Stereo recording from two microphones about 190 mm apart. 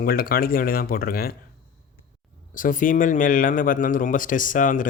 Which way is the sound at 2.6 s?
45° left (ahead or behind).